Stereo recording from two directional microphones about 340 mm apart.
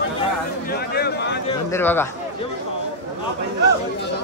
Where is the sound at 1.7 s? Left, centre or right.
Centre.